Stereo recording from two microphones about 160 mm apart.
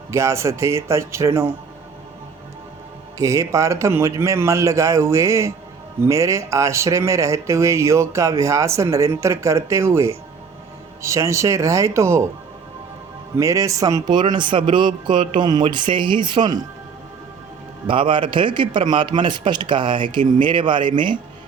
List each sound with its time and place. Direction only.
0.1 s a man's voice: 20° right (ahead or behind)
3.2 s speech: 20° right (ahead or behind)
13.3 s speech: 20° right (ahead or behind)
17.8 s a man's voice: 30° right (ahead or behind)